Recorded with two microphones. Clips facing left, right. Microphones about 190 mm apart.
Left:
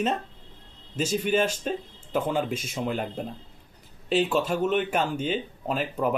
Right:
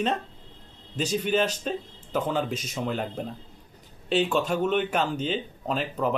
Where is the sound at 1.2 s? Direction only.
10° left (ahead or behind).